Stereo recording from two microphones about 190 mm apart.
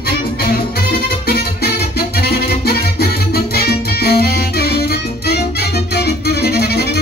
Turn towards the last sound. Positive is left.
turn(degrees=60)  # may be behind; listen again after turning